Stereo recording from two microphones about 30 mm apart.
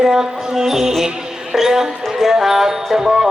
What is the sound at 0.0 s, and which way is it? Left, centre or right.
Music, centre.